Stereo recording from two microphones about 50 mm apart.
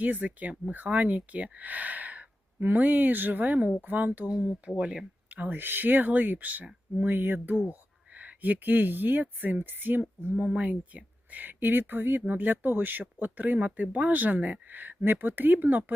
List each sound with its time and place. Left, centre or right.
0.0 s speech: right
5.3 s speech: right
7.7 s speech: right